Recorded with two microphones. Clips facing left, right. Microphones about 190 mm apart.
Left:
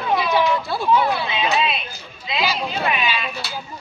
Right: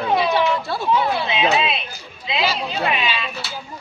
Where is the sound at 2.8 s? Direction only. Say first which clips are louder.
Right 1 dB; 25° right (ahead or behind).